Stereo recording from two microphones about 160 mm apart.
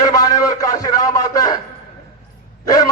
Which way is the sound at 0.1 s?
20° left (ahead or behind).